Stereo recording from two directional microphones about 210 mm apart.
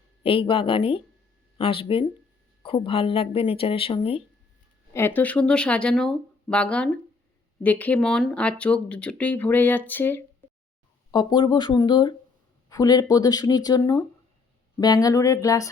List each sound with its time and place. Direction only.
0.2 s speech: 25° left (ahead or behind)
4.9 s speech: 10° left (ahead or behind)
11.1 s speech: 20° left (ahead or behind)